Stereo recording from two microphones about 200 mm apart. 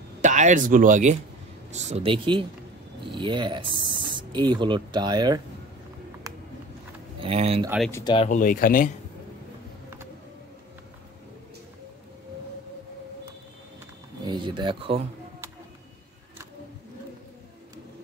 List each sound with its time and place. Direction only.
0.2 s speech: 40° right (ahead or behind); by 5.4 s 20° right (ahead or behind)
7.2 s speech: 30° right (ahead or behind)
7.9 s speech: 20° left (ahead or behind)
8.3 s speech: 45° left (ahead or behind)
14.2 s a sound: 25° right (ahead or behind)